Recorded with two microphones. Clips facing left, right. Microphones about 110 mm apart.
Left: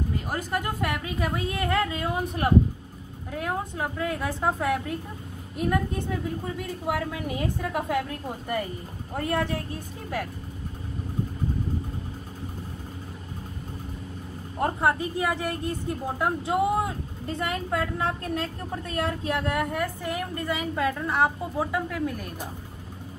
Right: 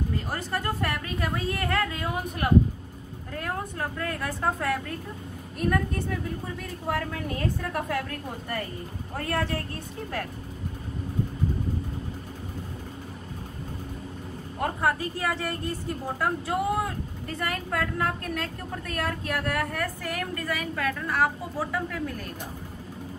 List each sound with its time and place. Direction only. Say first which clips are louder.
0.3 s a woman's voice: left 1 dB; 15° left (ahead or behind)
3.3 s a woman's voice: left 2 dB; 15° left (ahead or behind)
14.6 s a woman's voice: left 2 dB; 25° left (ahead or behind)